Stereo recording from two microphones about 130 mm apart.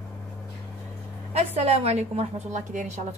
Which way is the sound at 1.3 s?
50° right (ahead or behind).